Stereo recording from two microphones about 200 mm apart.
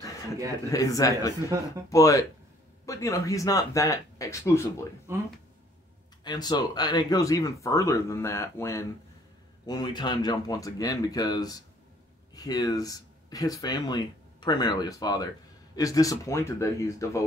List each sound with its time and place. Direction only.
0.7 s speech: 15° left (ahead or behind)
5.1 s speech: 15° right (ahead or behind)
6.2 s speech: 20° left (ahead or behind)